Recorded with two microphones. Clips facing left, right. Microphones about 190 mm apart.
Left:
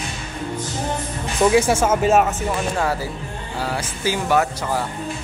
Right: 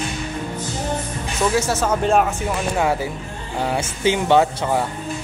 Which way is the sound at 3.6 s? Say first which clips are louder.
Right 4 dB; 20° right (ahead or behind).